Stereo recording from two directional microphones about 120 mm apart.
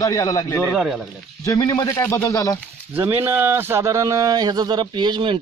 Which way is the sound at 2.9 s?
15° right (ahead or behind).